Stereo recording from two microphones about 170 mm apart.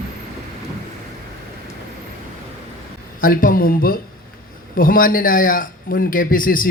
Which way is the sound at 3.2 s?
55° left (ahead or behind).